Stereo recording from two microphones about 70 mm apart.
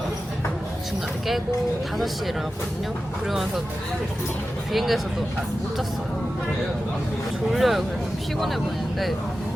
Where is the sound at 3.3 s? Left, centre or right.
Centre.